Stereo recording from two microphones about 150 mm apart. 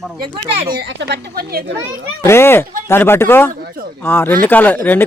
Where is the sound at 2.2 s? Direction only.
15° left (ahead or behind).